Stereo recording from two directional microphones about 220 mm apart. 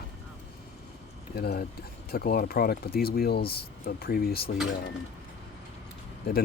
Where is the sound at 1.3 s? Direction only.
45° left (ahead or behind).